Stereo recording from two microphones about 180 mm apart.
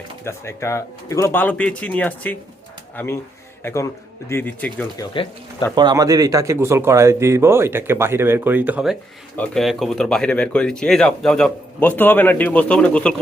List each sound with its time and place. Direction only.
0.3 s a man's voice: 15° left (ahead or behind)
5.1 s speech: 30° left (ahead or behind)
5.7 s speech: 20° right (ahead or behind); by 13.1 s 5° left (ahead or behind)